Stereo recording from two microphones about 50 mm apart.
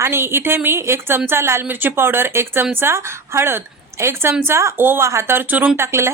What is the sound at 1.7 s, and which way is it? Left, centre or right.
A woman's voice, right.